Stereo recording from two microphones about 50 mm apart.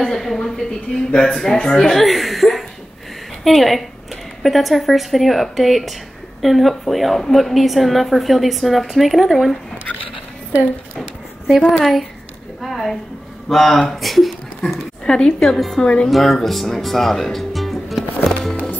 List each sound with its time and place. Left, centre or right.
0.0 s a woman's voice: centre
11.4 s a woman's voice: centre
12.6 s a sound: centre
13.5 s a woman's voice: centre
15.0 s a woman's voice: centre
15.4 s a woman's voice: centre
15.8 s a woman's voice: centre
16.1 s speech: centre
18.2 s music: centre